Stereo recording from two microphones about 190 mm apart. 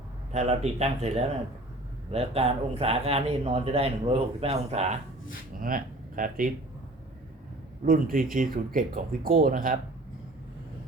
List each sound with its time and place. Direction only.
0.3 s speech: 35° right (ahead or behind)
5.5 s speech: 45° right (ahead or behind)
7.9 s speech: 45° right (ahead or behind)